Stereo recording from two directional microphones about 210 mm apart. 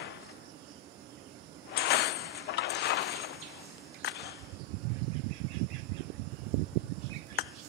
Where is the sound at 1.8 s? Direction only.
50° left (ahead or behind).